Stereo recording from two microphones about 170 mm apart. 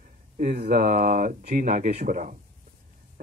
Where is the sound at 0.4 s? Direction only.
55° right (ahead or behind).